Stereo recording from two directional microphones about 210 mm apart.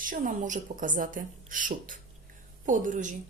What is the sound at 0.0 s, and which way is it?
A woman's voice, 40° right (ahead or behind).